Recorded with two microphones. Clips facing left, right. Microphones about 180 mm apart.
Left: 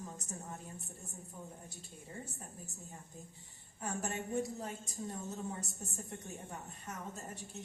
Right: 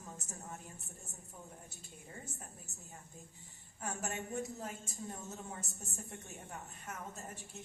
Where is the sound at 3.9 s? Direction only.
35° left (ahead or behind).